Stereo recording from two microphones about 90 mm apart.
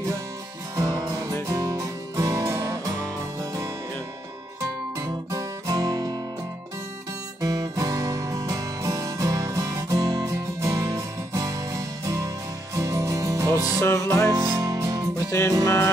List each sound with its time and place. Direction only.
0.7 s music: 45° right (ahead or behind)
4.6 s guitar: 40° right (ahead or behind)
7.4 s music: 40° right (ahead or behind)
13.7 s music: 35° left (ahead or behind)
14.3 s music: 30° right (ahead or behind)
15.1 s music: 35° left (ahead or behind)